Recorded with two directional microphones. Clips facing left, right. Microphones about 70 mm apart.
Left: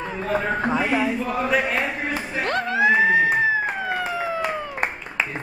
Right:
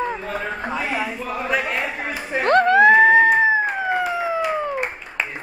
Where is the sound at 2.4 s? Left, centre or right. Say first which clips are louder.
Right 8 dB; right.